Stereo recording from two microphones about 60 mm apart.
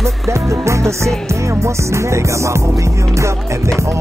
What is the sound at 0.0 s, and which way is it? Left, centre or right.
Music, right.